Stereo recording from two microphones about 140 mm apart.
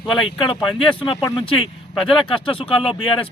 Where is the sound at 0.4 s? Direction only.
40° left (ahead or behind).